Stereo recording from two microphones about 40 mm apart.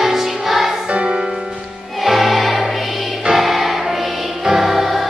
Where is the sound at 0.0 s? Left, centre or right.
Centre.